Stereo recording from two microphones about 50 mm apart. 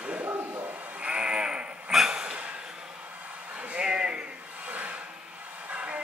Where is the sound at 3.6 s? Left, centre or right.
Right.